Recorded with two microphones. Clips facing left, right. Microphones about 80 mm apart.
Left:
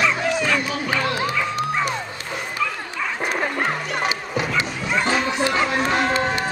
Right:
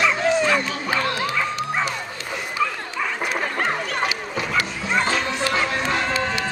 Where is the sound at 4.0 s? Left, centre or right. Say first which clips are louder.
Left 1 dB; left.